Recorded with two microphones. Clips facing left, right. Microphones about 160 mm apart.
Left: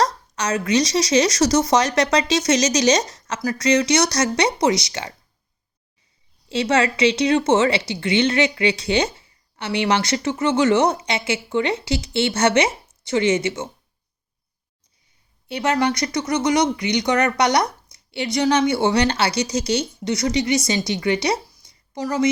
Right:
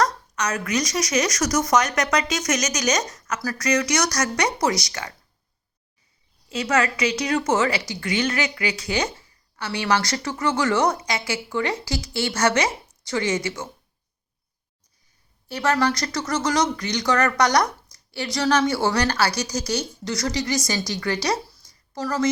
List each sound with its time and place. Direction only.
0.0 s a woman's voice: 30° left (ahead or behind)
6.5 s a woman's voice: 30° left (ahead or behind)
15.4 s a woman's voice: 20° left (ahead or behind)